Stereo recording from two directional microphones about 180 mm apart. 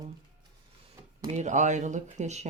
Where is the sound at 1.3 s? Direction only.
40° right (ahead or behind).